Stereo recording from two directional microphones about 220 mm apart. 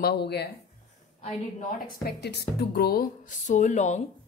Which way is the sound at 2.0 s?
50° left (ahead or behind).